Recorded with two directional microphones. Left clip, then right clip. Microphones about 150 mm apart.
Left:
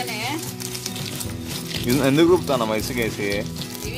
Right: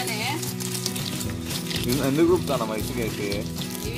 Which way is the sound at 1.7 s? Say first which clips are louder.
Left 4 dB; centre (ahead or behind).